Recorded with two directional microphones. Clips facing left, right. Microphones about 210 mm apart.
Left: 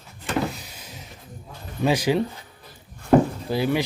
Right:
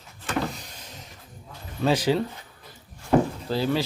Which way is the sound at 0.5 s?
5° left (ahead or behind).